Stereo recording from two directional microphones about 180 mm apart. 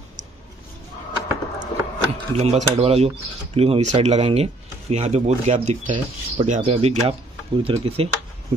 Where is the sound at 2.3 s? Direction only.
35° right (ahead or behind).